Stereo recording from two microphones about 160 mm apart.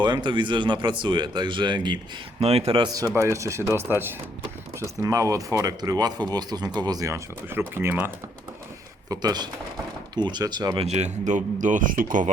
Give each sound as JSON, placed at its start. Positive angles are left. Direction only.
{"t": 0.0, "sound": "speech", "side_deg": -30}
{"t": 2.4, "sound": "a man's voice", "side_deg": -40}
{"t": 9.0, "sound": "speech", "side_deg": -25}
{"t": 10.8, "sound": "speech", "side_deg": -45}